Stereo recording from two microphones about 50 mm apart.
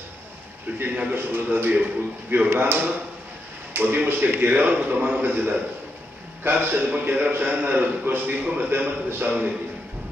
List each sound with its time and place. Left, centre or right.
1.1 s a man's voice: right
2.5 s a man's voice: right